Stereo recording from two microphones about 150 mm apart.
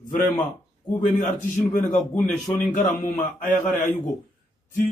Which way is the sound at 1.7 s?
60° left (ahead or behind).